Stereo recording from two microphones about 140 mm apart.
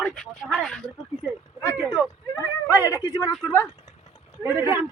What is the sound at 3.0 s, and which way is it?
Speech, 25° left (ahead or behind).